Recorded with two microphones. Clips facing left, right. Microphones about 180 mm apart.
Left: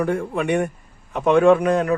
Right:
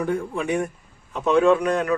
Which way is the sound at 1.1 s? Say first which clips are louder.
Left 3 dB; 55° left (ahead or behind).